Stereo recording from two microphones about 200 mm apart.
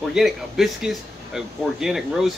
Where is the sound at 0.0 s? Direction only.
Centre (ahead or behind).